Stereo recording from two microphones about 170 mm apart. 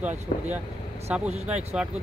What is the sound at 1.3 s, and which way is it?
Speech, 40° right (ahead or behind).